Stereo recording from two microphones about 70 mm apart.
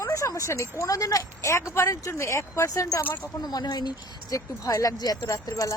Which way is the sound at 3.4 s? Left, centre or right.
Left.